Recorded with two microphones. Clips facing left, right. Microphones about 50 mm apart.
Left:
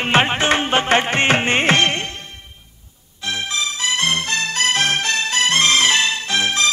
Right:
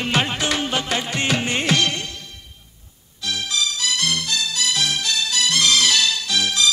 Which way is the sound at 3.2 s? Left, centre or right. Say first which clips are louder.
Left 1 dB; left.